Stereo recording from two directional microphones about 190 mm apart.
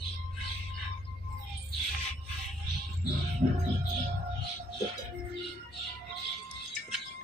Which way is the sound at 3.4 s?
40° right (ahead or behind).